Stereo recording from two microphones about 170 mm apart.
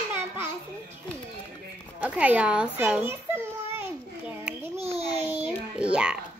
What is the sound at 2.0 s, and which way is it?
A child's voice, 10° right (ahead or behind).